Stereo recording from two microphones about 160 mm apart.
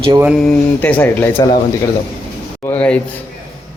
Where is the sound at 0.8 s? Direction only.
10° left (ahead or behind).